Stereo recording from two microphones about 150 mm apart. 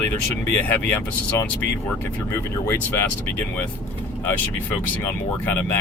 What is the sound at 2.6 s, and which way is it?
Speech, 15° left (ahead or behind).